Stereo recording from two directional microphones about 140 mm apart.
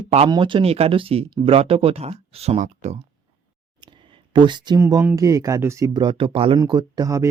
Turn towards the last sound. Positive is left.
turn(degrees=-25)  # may be behind; listen again after turning